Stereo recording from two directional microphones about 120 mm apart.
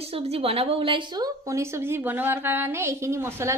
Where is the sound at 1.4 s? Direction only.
25° right (ahead or behind).